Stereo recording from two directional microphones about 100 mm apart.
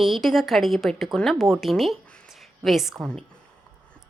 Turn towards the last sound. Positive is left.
turn(degrees=0)  # may be behind; listen again after turning